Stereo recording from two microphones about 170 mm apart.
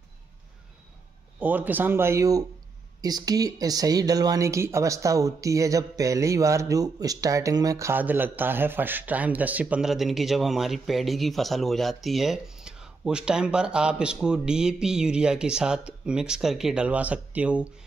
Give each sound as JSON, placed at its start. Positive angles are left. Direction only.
{"t": 1.4, "sound": "speech", "side_deg": -10}